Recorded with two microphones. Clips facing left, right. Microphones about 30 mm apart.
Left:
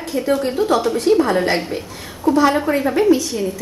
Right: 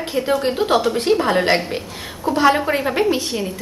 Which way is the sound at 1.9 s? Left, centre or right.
Right.